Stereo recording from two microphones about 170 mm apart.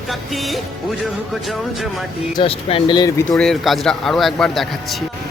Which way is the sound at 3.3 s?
Centre (ahead or behind).